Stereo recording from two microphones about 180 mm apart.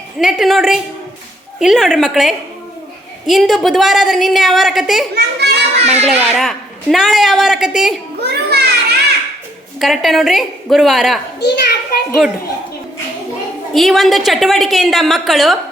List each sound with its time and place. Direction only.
0.2 s a man's voice: centre (ahead or behind)
5.1 s a child's voice: 65° right (ahead or behind)
5.8 s a child's voice: 35° right (ahead or behind)
6.1 s a man's voice: centre (ahead or behind)
8.3 s a sound: 65° right (ahead or behind)
9.8 s a man's voice: centre (ahead or behind)
11.3 s a sound: 65° left (ahead or behind)
13.7 s a man's voice: centre (ahead or behind)